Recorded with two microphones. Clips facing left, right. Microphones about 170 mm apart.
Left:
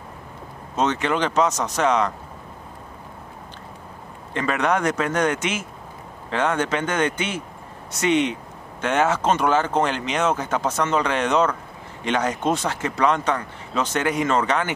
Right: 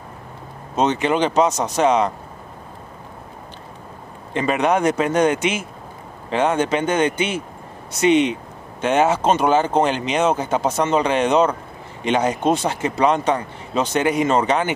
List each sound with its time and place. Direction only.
0.7 s speech: 20° right (ahead or behind)
4.3 s a man's voice: 20° right (ahead or behind)